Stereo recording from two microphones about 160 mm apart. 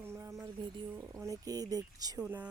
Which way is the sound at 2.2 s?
10° right (ahead or behind).